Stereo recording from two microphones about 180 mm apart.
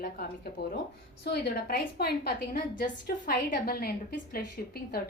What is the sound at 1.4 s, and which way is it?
A woman's voice, 60° left (ahead or behind).